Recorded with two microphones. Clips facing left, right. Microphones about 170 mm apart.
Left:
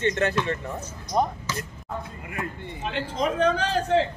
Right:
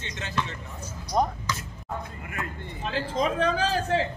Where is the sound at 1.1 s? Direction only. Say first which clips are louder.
Left 1 dB; centre (ahead or behind).